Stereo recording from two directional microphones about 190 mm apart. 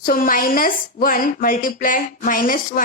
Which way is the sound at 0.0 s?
50° left (ahead or behind).